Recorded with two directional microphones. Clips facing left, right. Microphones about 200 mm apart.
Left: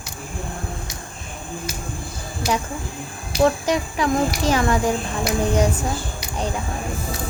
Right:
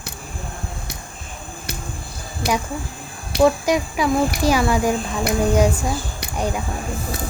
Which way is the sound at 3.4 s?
10° right (ahead or behind).